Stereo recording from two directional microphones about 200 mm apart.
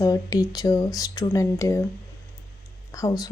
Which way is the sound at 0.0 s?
15° left (ahead or behind).